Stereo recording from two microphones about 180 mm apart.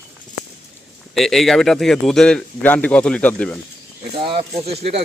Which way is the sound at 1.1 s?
Centre (ahead or behind).